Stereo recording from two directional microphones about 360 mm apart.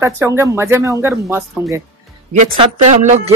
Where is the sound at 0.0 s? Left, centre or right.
Centre.